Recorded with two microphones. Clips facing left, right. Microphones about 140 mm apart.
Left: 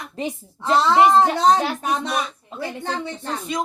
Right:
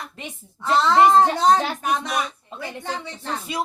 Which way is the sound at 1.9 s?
30° left (ahead or behind).